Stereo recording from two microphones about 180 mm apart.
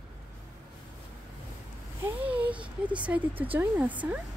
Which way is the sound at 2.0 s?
10° right (ahead or behind).